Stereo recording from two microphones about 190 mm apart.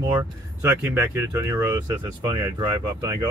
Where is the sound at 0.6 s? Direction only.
10° right (ahead or behind).